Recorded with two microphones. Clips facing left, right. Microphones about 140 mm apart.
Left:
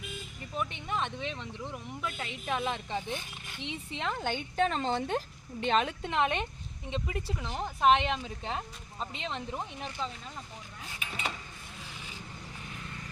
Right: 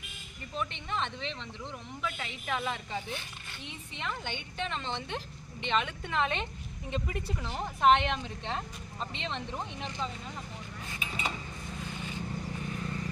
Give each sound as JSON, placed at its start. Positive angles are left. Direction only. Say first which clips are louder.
{"t": 0.5, "sound": "speech", "louder": "left 1 dB", "side_deg": 10}
{"t": 3.9, "sound": "a woman's voice", "louder": "left 4 dB", "side_deg": 35}
{"t": 6.1, "sound": "speech", "louder": "left 2 dB", "side_deg": 15}
{"t": 6.9, "sound": "speech", "louder": "even", "side_deg": 0}
{"t": 11.0, "sound": "cutlery", "louder": "right 1 dB", "side_deg": 0}